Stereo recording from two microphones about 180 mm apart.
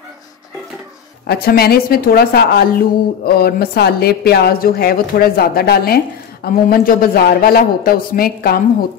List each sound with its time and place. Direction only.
1.2 s a woman's voice: 60° left (ahead or behind)